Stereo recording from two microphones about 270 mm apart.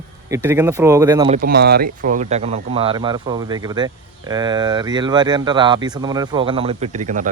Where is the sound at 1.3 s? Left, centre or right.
Right.